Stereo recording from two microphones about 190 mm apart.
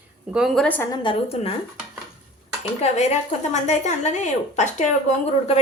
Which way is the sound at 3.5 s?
35° left (ahead or behind).